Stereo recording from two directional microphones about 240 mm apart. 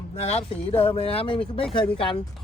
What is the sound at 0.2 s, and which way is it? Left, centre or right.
Speech, left.